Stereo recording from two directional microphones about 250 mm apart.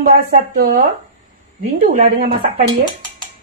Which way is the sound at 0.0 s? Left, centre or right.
Right.